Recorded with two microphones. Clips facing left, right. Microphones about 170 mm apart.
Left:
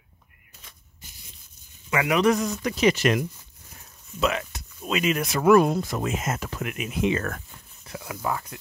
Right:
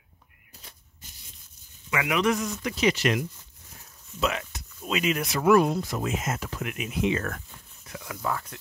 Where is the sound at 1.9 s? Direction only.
40° left (ahead or behind).